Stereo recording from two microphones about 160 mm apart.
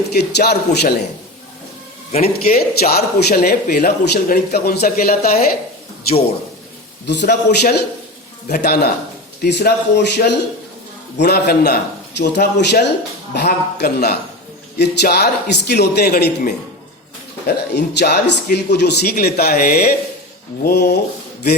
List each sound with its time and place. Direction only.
0.1 s a man's voice: 90° left
2.1 s a man's voice: 40° left (ahead or behind)
2.6 s speech: 75° left (ahead or behind)
7.1 s a man's voice: 90° left
14.8 s a man's voice: 90° left
17.4 s speech: 90° left; by 20.0 s 70° left (ahead or behind)
20.7 s a man's voice: 90° left